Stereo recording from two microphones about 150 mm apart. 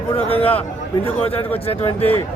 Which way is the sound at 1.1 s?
40° left (ahead or behind).